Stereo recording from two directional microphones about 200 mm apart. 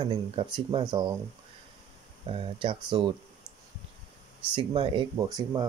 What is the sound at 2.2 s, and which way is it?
Speech, 25° right (ahead or behind).